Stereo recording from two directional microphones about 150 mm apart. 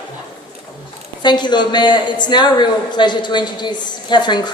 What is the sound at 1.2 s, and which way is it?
A man's voice, 30° left (ahead or behind).